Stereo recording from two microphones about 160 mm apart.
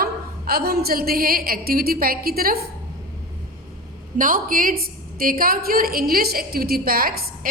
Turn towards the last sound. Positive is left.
turn(degrees=-65)  # may be behind; listen again after turning